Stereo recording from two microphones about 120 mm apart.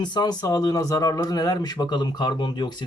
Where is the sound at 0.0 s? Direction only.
35° left (ahead or behind).